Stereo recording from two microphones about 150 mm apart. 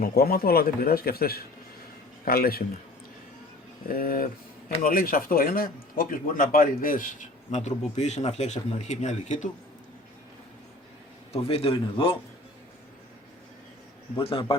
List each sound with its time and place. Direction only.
0.0 s a man's voice: 80° left
3.8 s speech: 75° left (ahead or behind); by 9.5 s 50° left (ahead or behind)
11.3 s a man's voice: 40° left (ahead or behind)
14.2 s a man's voice: 35° left (ahead or behind)